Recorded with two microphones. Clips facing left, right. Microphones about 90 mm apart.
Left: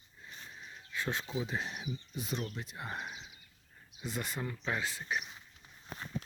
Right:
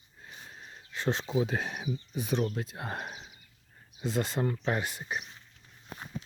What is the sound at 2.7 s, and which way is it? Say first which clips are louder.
Speech: right 4 dB; 80° right.